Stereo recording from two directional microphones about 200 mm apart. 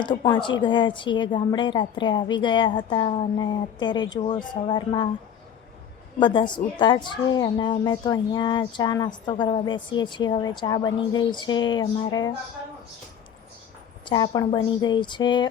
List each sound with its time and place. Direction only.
0.0 s speech: 25° left (ahead or behind)
6.1 s speech: 25° left (ahead or behind)
14.0 s speech: 20° left (ahead or behind)